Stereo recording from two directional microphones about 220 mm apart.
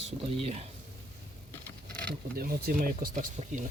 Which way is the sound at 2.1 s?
45° right (ahead or behind).